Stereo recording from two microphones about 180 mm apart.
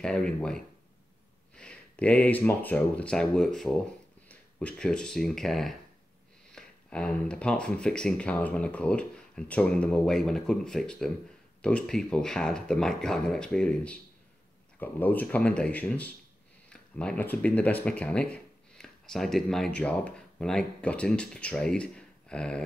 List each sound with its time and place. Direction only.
0.0 s speech: 5° left (ahead or behind)